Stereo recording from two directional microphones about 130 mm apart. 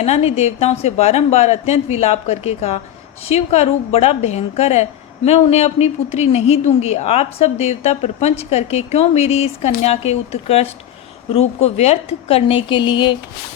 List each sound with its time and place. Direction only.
0.0 s a woman's voice: 55° left (ahead or behind); by 13.1 s 35° left (ahead or behind)